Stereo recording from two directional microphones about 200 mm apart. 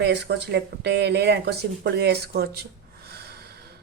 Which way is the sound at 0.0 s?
55° right (ahead or behind).